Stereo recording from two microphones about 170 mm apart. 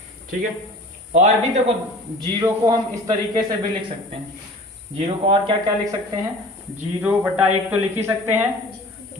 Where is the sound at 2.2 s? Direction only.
20° right (ahead or behind).